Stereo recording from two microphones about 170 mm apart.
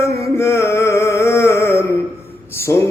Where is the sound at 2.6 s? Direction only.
15° left (ahead or behind).